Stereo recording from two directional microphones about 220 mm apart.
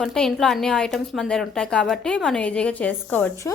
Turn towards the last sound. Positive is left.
turn(degrees=10)  # may be behind; listen again after turning